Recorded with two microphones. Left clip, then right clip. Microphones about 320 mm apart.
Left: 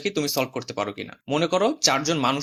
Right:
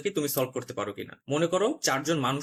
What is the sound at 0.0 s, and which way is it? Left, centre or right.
Speech, centre.